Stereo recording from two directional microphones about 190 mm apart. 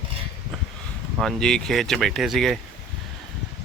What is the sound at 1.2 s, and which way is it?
Speech, centre (ahead or behind).